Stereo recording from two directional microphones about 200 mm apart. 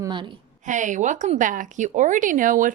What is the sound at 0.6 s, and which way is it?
Speech, 40° right (ahead or behind).